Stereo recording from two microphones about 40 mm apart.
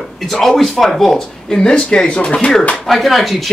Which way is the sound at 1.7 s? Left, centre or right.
Left.